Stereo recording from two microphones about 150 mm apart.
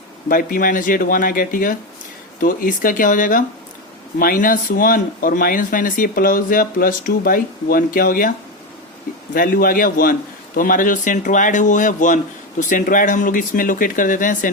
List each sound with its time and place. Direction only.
0.3 s speech: 70° left (ahead or behind)
9.3 s speech: 70° left (ahead or behind)